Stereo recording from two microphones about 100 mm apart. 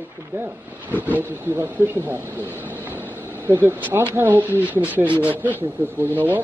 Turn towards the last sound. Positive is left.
turn(degrees=-20)  # may be behind; listen again after turning